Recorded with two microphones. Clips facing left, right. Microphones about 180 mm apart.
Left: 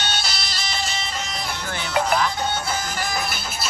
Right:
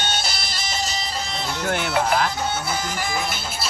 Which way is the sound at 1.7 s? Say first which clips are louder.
Right 1 dB; 65° right (ahead or behind).